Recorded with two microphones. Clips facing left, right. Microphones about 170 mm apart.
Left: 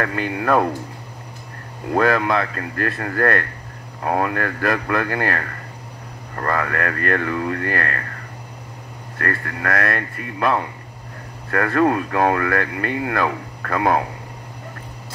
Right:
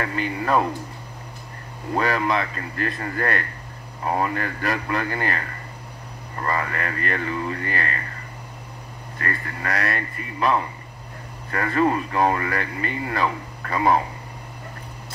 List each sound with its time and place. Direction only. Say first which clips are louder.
0.0 s speech: left 3 dB; 55° left (ahead or behind)
2.0 s speech: left 4 dB; 50° left (ahead or behind)
9.2 s speech: left 5 dB; 60° left (ahead or behind)